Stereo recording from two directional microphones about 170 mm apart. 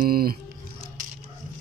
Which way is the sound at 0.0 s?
60° right (ahead or behind).